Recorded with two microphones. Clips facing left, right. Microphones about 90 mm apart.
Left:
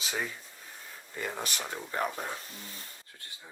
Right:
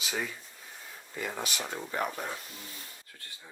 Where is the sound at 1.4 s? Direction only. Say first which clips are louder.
Right 1 dB; 45° left (ahead or behind).